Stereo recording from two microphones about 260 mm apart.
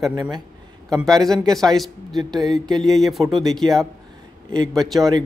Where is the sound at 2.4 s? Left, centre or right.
Centre.